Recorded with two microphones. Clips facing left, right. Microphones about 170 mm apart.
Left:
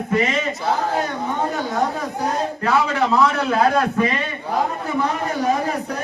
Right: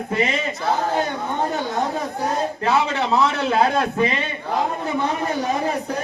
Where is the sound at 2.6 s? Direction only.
25° right (ahead or behind).